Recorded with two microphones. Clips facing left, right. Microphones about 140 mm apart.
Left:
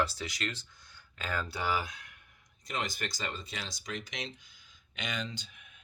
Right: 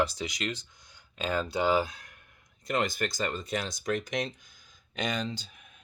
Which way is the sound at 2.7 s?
55° right (ahead or behind).